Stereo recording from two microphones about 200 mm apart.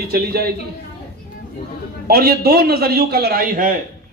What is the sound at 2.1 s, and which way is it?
A man's voice, 50° right (ahead or behind).